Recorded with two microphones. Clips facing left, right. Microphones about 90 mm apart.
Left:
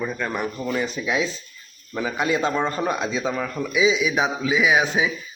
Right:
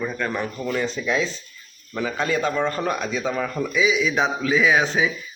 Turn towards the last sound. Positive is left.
turn(degrees=10)  # may be behind; listen again after turning